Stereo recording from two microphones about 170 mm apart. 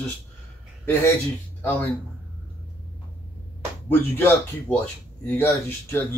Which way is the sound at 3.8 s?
10° left (ahead or behind).